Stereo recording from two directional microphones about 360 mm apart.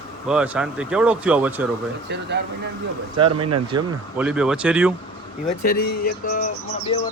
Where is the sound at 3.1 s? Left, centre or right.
Centre.